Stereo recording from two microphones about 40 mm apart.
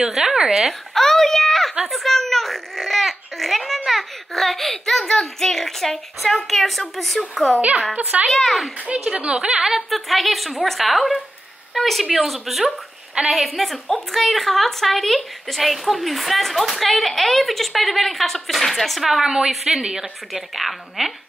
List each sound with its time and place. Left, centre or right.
0.0 s a sound: centre
0.4 s speech: centre
0.7 s a child's voice: centre
7.9 s a child's voice: right
8.3 s a woman's voice: centre
9.1 s a woman's voice: right
9.7 s a woman's voice: centre
19.8 s a woman's voice: centre
20.3 s a woman's voice: centre